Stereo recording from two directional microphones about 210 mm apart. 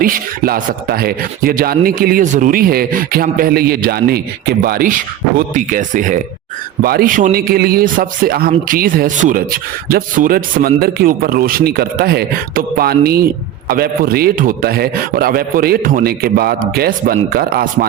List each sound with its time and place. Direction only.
0.0 s a man's voice: 45° right (ahead or behind)